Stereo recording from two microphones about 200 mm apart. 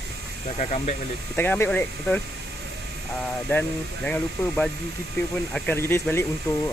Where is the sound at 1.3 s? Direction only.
10° left (ahead or behind).